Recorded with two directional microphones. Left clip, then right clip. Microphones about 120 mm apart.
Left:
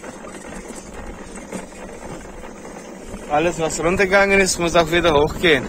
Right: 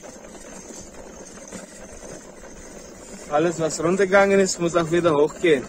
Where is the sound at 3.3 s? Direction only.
45° right (ahead or behind).